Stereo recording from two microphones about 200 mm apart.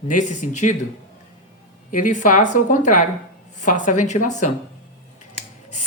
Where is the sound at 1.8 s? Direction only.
40° left (ahead or behind).